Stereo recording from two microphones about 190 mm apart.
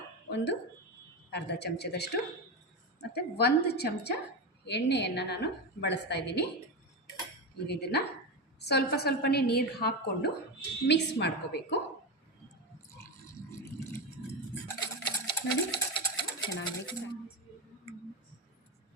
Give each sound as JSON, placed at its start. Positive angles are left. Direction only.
{"t": 0.3, "sound": "a woman's voice", "side_deg": 65}
{"t": 7.7, "sound": "a woman's voice", "side_deg": 60}
{"t": 12.9, "sound": "a sound", "side_deg": 15}
{"t": 14.7, "sound": "stir", "side_deg": 25}
{"t": 16.6, "sound": "speech", "side_deg": 25}